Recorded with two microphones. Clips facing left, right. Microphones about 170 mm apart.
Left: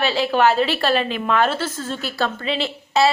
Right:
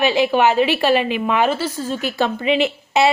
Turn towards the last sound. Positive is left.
turn(degrees=-15)  # may be behind; listen again after turning